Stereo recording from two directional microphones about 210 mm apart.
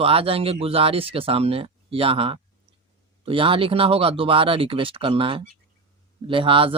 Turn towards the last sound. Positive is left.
turn(degrees=-25)  # may be behind; listen again after turning